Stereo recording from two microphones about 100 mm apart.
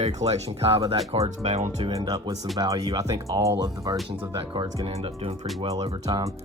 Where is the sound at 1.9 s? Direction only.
35° right (ahead or behind).